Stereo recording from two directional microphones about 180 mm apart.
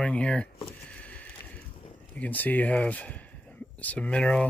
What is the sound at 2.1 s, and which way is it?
Speech, 10° left (ahead or behind).